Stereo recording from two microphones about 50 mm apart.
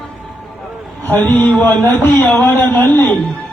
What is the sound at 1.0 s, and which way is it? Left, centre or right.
Speech, left.